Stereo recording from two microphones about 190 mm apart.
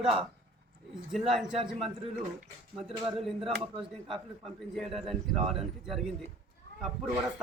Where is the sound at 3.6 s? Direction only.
30° right (ahead or behind).